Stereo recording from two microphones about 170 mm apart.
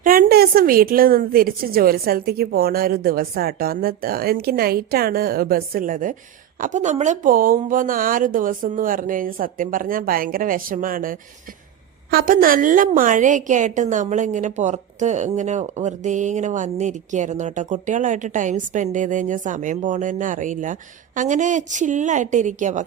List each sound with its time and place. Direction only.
0.0 s a woman's voice: 55° right (ahead or behind)